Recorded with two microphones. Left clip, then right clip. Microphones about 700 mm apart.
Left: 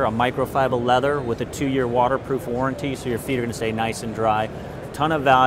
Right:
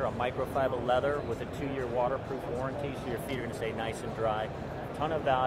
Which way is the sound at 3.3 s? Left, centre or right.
Left.